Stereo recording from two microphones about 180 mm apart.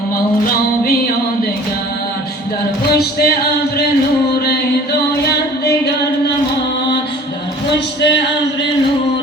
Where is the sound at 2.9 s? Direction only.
60° left (ahead or behind).